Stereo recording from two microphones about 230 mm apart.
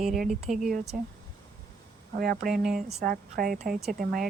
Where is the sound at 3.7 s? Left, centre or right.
Centre.